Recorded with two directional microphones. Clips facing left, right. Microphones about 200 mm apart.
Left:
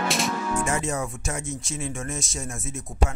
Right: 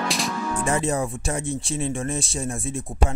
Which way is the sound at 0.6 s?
35° right (ahead or behind).